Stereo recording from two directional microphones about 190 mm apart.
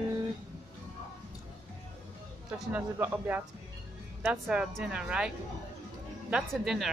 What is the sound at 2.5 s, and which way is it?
A woman's voice, 10° right (ahead or behind).